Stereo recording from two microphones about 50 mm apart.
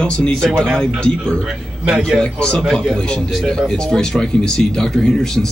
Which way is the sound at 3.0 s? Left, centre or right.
Centre.